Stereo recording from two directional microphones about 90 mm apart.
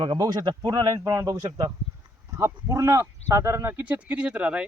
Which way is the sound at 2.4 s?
30° right (ahead or behind).